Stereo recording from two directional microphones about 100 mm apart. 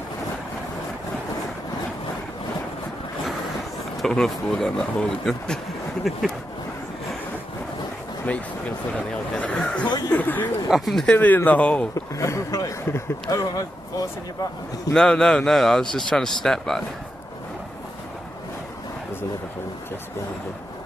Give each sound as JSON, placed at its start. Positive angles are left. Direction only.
{"t": 4.0, "sound": "a man's voice", "side_deg": 5}
{"t": 8.3, "sound": "speech", "side_deg": 15}
{"t": 9.8, "sound": "speech", "side_deg": 40}
{"t": 10.1, "sound": "speech", "side_deg": 15}
{"t": 10.7, "sound": "a man's voice", "side_deg": 0}
{"t": 11.1, "sound": "speech", "side_deg": 15}
{"t": 11.9, "sound": "speech", "side_deg": 30}
{"t": 15.0, "sound": "a man's voice", "side_deg": 5}